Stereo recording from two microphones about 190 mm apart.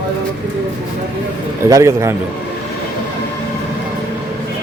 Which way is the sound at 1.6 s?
15° right (ahead or behind).